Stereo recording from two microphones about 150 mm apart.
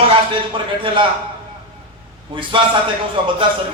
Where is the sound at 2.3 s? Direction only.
35° right (ahead or behind).